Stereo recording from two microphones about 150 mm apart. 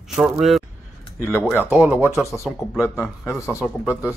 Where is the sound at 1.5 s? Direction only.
10° right (ahead or behind).